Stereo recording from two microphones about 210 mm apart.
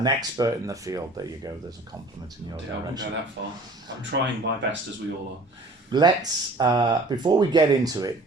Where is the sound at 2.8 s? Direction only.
20° right (ahead or behind).